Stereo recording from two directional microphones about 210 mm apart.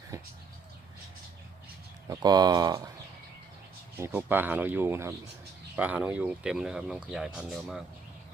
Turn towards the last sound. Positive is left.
turn(degrees=-5)  # may be behind; listen again after turning